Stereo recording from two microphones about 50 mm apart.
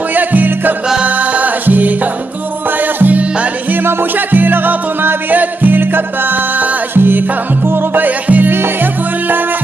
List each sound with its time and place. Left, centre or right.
0.1 s music: right
3.0 s music: right